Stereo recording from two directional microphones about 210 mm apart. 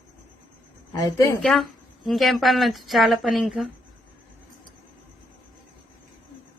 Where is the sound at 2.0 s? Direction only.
Centre (ahead or behind).